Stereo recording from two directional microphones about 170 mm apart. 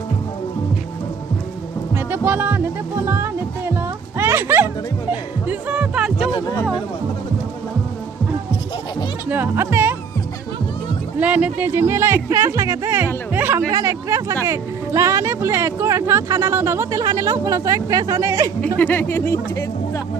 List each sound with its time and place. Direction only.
2.0 s music: 10° right (ahead or behind)
3.8 s music: 15° right (ahead or behind)
6.3 s speech: 20° left (ahead or behind)
9.3 s speech: 10° right (ahead or behind)
11.2 s speech: 10° right (ahead or behind)
18.8 s speech: 10° left (ahead or behind)